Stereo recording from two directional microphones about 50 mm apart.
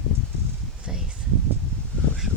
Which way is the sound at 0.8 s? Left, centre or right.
Centre.